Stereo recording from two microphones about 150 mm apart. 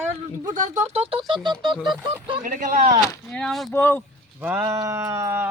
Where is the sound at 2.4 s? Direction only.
65° right (ahead or behind).